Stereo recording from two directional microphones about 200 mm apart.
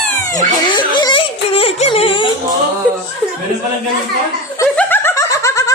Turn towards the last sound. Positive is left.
turn(degrees=15)  # may be behind; listen again after turning